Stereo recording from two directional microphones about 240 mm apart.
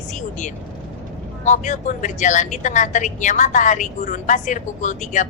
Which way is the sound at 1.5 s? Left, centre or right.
Left.